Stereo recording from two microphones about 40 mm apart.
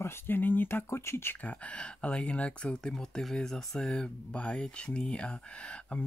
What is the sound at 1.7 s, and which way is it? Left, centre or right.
Speech, left.